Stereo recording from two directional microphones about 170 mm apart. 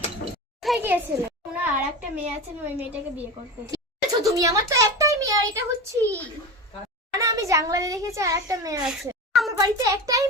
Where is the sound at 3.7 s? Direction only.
20° right (ahead or behind).